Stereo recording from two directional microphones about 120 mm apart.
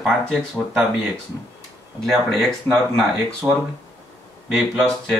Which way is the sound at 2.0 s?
Centre (ahead or behind).